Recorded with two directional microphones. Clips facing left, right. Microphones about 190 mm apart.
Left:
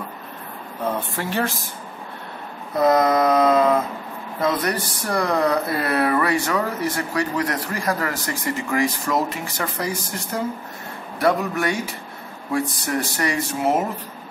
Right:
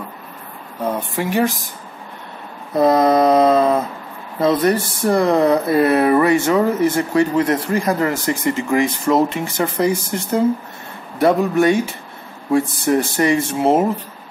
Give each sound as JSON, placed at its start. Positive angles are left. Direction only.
{"t": 0.8, "sound": "speech", "side_deg": -15}
{"t": 2.8, "sound": "speech", "side_deg": -30}